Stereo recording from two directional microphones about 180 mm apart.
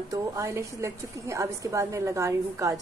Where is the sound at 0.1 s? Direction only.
15° right (ahead or behind).